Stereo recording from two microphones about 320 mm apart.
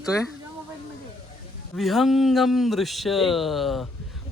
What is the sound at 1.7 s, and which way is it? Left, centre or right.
Speech, centre.